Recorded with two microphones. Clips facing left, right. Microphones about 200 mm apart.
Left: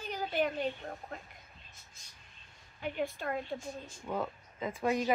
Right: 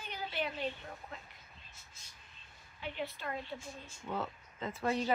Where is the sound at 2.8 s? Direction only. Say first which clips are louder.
Left 5 dB; 45° left (ahead or behind).